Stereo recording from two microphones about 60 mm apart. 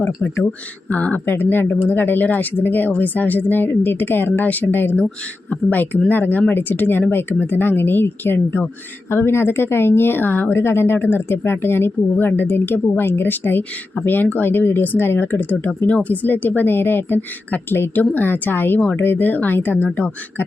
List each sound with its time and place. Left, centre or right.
0.9 s a woman's voice: left